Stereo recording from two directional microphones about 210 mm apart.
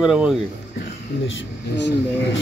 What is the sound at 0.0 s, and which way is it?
Speech, 5° right (ahead or behind).